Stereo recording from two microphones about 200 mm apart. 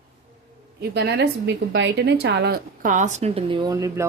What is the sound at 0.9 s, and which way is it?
Speech, 55° right (ahead or behind).